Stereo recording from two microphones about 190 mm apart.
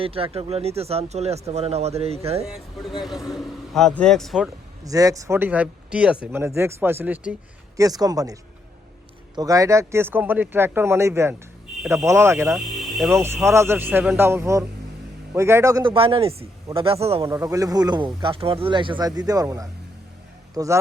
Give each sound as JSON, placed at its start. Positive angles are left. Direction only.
{"t": 0.0, "sound": "speech", "side_deg": -30}
{"t": 3.0, "sound": "a man's voice", "side_deg": 0}
{"t": 4.9, "sound": "speech", "side_deg": -20}
{"t": 7.8, "sound": "speech", "side_deg": -20}
{"t": 12.5, "sound": "music", "side_deg": 0}
{"t": 13.1, "sound": "speech", "side_deg": -15}
{"t": 15.9, "sound": "speech", "side_deg": -30}
{"t": 17.2, "sound": "a man's voice", "side_deg": -15}